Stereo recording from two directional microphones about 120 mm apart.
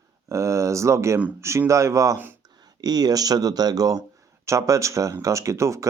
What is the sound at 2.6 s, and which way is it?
Speech, 35° right (ahead or behind).